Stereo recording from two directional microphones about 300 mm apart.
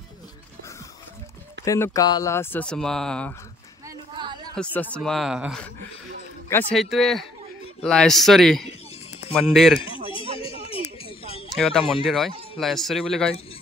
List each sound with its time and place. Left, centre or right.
1.6 s speech: centre
4.1 s chatter: centre
4.8 s speech: centre
10.4 s a sound: centre
11.5 s speech: centre